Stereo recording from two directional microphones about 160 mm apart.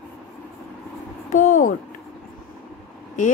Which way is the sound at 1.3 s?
55° left (ahead or behind).